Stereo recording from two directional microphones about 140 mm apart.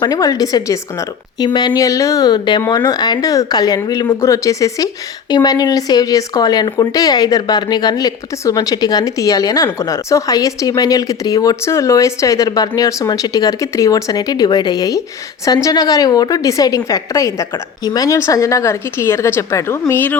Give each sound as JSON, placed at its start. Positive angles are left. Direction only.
{"t": 0.0, "sound": "speech", "side_deg": 25}